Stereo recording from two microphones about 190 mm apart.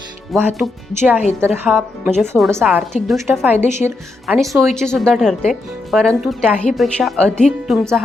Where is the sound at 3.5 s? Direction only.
35° left (ahead or behind).